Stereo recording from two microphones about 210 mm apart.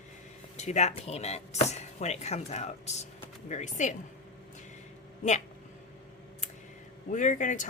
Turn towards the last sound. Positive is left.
turn(degrees=35)  # may be behind; listen again after turning